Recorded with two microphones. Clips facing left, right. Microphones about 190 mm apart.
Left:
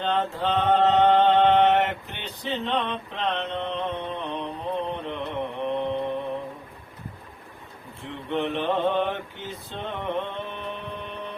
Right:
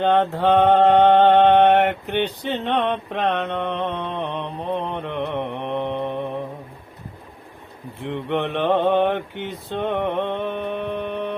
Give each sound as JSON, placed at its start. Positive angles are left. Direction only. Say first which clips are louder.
{"t": 0.0, "sound": "mantra", "louder": "right 7 dB", "side_deg": -60}
{"t": 8.1, "sound": "mantra", "louder": "right 3 dB", "side_deg": -65}